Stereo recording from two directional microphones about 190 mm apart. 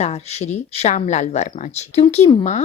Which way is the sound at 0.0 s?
35° left (ahead or behind).